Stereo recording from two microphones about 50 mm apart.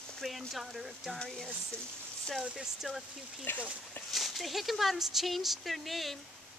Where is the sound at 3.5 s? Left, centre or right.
Left.